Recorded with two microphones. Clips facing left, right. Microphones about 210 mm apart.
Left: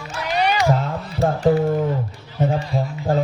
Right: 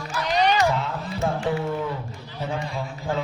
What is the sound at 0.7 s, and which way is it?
Music, 40° left (ahead or behind).